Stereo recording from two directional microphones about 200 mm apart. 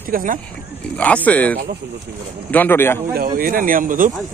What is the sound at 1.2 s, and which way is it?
Speech, 5° left (ahead or behind).